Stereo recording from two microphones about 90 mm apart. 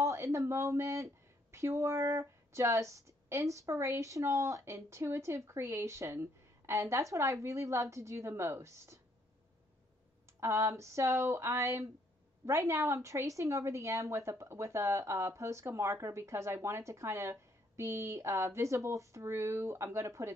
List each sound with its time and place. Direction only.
0.0 s a woman's voice: 35° right (ahead or behind)
10.4 s speech: 35° right (ahead or behind)